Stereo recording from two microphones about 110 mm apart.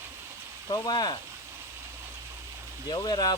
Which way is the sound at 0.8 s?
40° left (ahead or behind).